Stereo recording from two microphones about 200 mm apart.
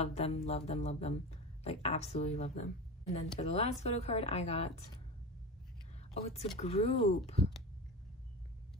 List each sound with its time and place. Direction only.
0.0 s speech: 30° left (ahead or behind)
6.6 s speech: 30° left (ahead or behind)